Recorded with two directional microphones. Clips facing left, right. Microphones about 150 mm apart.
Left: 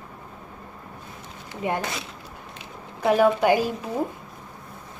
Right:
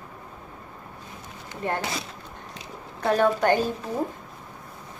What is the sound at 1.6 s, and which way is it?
Speech, 10° left (ahead or behind).